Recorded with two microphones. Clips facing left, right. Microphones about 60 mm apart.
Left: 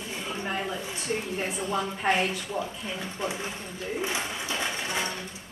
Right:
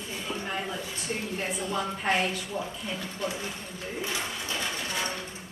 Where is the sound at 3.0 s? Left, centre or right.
Left.